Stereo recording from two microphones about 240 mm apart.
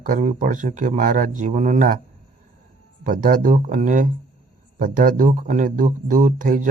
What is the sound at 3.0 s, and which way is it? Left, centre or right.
Speech, right.